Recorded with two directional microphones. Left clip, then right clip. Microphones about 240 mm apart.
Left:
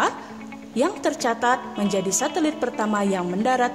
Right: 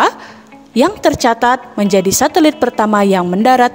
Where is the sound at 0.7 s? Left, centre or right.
Right.